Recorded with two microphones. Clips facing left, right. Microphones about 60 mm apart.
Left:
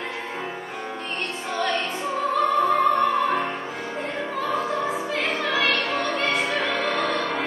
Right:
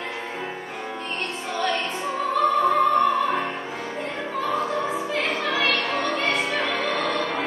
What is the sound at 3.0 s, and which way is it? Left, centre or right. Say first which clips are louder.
Music: right 1 dB; left.